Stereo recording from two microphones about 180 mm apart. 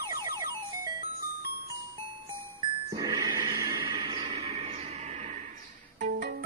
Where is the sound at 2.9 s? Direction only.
20° right (ahead or behind).